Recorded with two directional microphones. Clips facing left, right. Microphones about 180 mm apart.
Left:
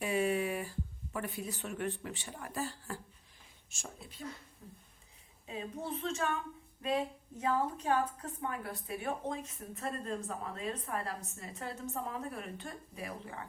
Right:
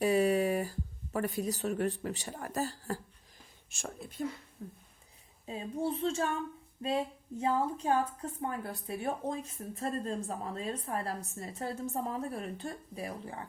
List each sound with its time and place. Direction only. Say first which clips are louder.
0.0 s speech: right 5 dB; 35° right (ahead or behind)
3.8 s speech: right 9 dB; 55° right (ahead or behind)
5.5 s a woman's voice: right 5 dB; 35° right (ahead or behind)